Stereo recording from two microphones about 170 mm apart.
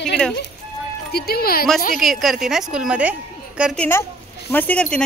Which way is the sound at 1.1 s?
65° left (ahead or behind).